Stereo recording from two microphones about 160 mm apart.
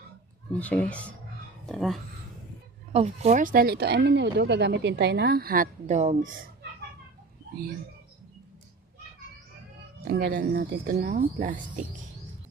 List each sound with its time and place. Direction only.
0.6 s speech: 10° left (ahead or behind)
2.9 s speech: 40° right (ahead or behind)
3.4 s a woman's voice: 65° right (ahead or behind)
5.8 s speech: 45° right (ahead or behind)
10.0 s speech: 75° right (ahead or behind)
10.9 s speech: 55° right (ahead or behind)